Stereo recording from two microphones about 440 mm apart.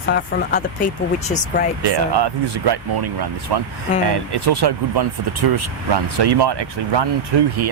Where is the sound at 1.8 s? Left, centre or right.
Right.